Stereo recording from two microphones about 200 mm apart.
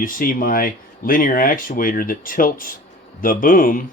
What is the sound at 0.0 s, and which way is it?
Speech, 45° left (ahead or behind).